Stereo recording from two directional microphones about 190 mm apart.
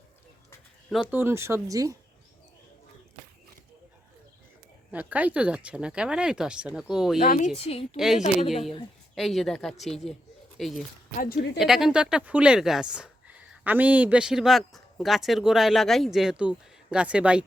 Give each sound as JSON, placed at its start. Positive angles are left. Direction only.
{"t": 1.1, "sound": "speech", "side_deg": -10}
{"t": 4.9, "sound": "speech", "side_deg": -10}
{"t": 7.2, "sound": "speech", "side_deg": 45}
{"t": 7.9, "sound": "speech", "side_deg": 0}
{"t": 11.2, "sound": "speech", "side_deg": 55}
{"t": 11.6, "sound": "speech", "side_deg": 0}